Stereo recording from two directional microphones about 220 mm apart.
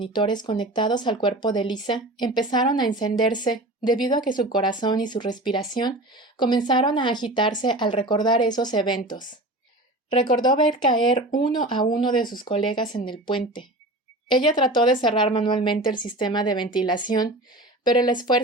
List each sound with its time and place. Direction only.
0.0 s speech: 20° left (ahead or behind)
10.1 s speech: 20° left (ahead or behind)